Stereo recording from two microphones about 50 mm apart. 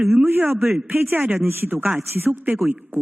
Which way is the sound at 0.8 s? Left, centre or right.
Right.